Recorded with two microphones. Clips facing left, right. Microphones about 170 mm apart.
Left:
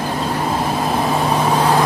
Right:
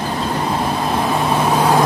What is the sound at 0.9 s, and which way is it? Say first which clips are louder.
Vehicle: even; centre (ahead or behind).